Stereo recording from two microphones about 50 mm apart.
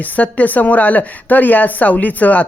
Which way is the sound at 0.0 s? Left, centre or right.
Left.